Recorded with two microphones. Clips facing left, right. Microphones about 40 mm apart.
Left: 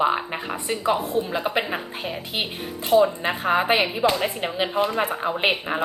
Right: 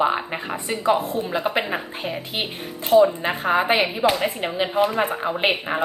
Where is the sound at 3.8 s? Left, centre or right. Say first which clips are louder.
Right 1 dB; right.